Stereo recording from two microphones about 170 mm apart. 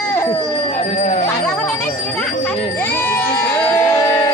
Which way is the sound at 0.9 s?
40° left (ahead or behind).